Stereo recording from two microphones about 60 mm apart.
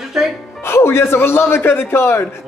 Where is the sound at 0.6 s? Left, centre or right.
Left.